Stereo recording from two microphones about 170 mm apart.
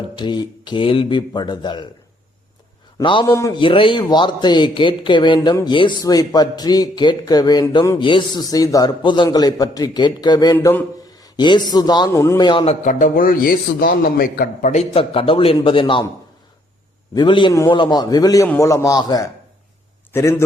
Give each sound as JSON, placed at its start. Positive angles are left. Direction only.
{"t": 0.2, "sound": "speech", "side_deg": 25}
{"t": 3.0, "sound": "speech", "side_deg": 30}
{"t": 3.2, "sound": "a man's voice", "side_deg": 20}
{"t": 3.6, "sound": "speech", "side_deg": 30}
{"t": 11.3, "sound": "a man's voice", "side_deg": 25}
{"t": 12.8, "sound": "a man's voice", "side_deg": 50}
{"t": 17.2, "sound": "a man's voice", "side_deg": 25}